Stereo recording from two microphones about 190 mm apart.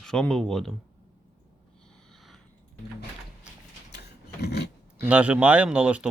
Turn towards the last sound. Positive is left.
turn(degrees=-5)  # may be behind; listen again after turning